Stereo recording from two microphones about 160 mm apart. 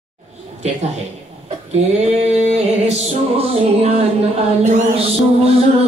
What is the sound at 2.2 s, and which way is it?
Music, 45° right (ahead or behind).